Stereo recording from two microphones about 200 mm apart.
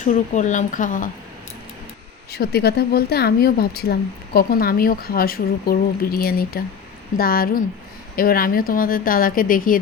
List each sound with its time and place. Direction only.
0.0 s a woman's voice: 40° left (ahead or behind)
2.3 s speech: 50° left (ahead or behind)